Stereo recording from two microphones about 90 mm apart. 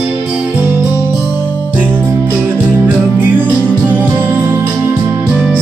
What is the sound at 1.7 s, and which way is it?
Music, 25° right (ahead or behind).